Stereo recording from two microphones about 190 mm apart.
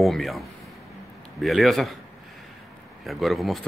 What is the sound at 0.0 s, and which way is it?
Speech, centre (ahead or behind).